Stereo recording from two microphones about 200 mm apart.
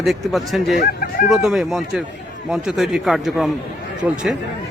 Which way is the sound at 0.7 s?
45° left (ahead or behind).